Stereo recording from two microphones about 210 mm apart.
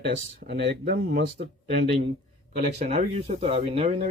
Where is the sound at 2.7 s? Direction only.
35° right (ahead or behind).